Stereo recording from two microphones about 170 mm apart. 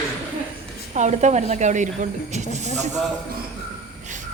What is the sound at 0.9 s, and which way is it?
Speech, 45° right (ahead or behind).